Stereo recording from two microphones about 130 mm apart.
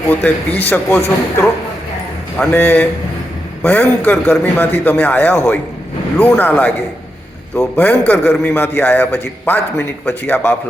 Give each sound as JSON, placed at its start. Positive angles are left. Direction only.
{"t": 0.1, "sound": "a man's voice", "side_deg": 15}
{"t": 2.5, "sound": "a man's voice", "side_deg": 15}